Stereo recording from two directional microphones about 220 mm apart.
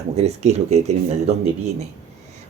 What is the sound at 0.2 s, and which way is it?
Speech, 30° right (ahead or behind).